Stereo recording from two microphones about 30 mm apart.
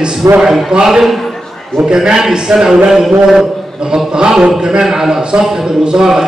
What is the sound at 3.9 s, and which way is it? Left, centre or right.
A man's voice, right.